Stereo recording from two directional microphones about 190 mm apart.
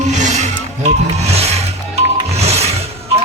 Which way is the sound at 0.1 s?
35° right (ahead or behind).